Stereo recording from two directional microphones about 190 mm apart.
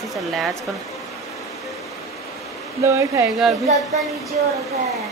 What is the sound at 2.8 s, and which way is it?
Speech, 15° right (ahead or behind).